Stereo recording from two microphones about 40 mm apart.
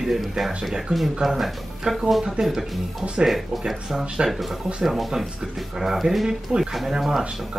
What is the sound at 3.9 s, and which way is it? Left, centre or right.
Speech, centre.